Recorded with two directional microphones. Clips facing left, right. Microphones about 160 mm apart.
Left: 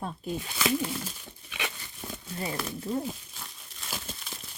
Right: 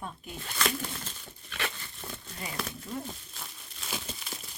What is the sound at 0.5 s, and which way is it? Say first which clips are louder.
Speech: left 3 dB; 5° left (ahead or behind).